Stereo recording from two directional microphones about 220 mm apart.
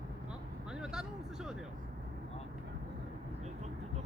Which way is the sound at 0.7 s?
5° right (ahead or behind).